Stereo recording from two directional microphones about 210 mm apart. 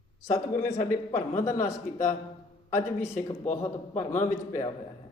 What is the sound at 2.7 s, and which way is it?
A man's voice, 10° left (ahead or behind).